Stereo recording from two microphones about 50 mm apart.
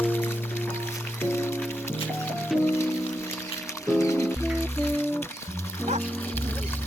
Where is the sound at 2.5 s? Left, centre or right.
Centre.